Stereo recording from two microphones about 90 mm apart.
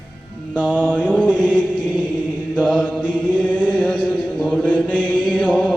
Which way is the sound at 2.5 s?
10° left (ahead or behind).